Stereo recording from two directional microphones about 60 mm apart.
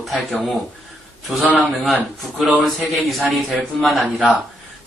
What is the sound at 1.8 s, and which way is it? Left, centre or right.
A man's voice, centre.